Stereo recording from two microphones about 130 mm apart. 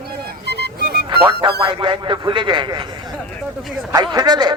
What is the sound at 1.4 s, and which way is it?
A man's voice, 40° right (ahead or behind).